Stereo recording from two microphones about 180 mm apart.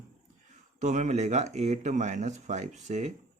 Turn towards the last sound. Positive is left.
turn(degrees=-40)  # may be behind; listen again after turning